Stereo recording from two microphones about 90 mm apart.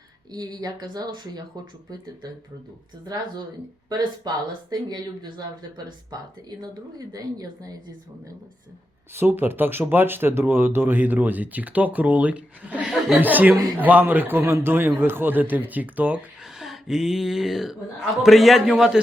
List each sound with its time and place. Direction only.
0.3 s speech: 45° right (ahead or behind)
3.8 s speech: 50° right (ahead or behind)
7.1 s speech: 45° right (ahead or behind)
9.1 s speech: 25° right (ahead or behind)
16.6 s a man's voice: 5° right (ahead or behind)